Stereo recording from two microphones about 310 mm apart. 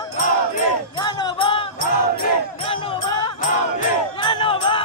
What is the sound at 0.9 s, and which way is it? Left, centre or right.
Music, centre.